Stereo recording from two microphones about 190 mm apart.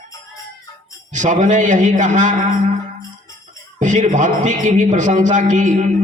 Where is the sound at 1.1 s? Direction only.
40° right (ahead or behind).